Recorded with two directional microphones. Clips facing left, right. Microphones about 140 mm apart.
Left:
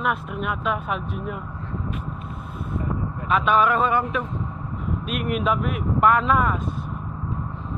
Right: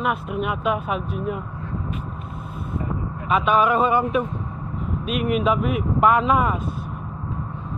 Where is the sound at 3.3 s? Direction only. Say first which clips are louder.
Right 1 dB; 5° right (ahead or behind).